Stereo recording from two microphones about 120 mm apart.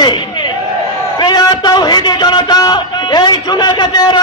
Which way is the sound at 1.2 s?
35° left (ahead or behind).